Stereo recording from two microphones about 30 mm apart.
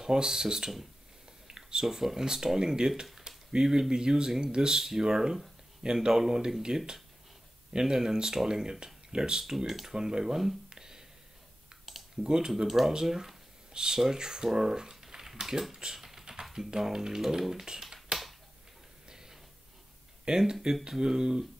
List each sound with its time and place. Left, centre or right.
0.0 s speech: right
3.3 s a sound: right
3.9 s speech: right
7.7 s speech: centre
9.4 s speech: centre
10.7 s a sound: centre
12.2 s speech: right
12.6 s speech: centre
16.0 s typing: centre
16.5 s speech: centre
19.0 s a sound: centre
20.2 s speech: right